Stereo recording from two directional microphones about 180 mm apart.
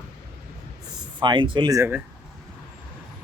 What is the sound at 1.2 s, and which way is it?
Speech, 25° right (ahead or behind).